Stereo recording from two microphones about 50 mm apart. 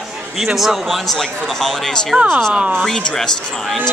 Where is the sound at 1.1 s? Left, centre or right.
Centre.